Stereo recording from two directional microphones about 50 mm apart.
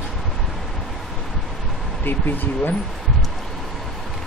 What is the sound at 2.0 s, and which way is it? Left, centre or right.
Speech, left.